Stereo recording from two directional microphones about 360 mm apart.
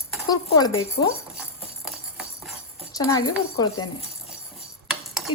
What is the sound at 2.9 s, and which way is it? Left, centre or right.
Speech, centre.